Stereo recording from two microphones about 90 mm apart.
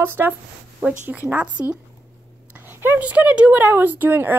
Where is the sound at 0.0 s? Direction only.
25° right (ahead or behind).